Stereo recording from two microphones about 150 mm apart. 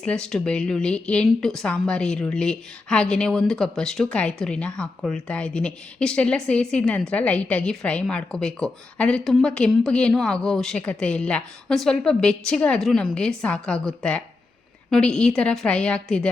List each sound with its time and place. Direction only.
0.0 s a woman's voice: 5° left (ahead or behind)